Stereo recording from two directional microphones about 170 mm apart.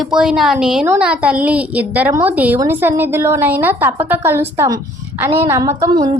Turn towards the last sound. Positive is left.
turn(degrees=-20)  # may be behind; listen again after turning